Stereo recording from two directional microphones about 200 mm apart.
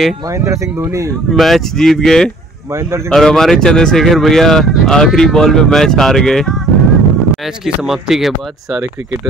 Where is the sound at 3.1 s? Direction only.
5° left (ahead or behind).